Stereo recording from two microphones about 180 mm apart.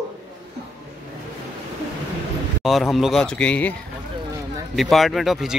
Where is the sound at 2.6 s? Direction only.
Centre (ahead or behind).